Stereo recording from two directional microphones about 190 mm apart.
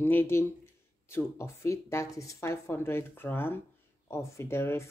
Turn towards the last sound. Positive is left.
turn(degrees=15)  # may be behind; listen again after turning